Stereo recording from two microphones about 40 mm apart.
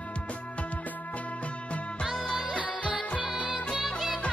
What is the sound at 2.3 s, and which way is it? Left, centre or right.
Music, right.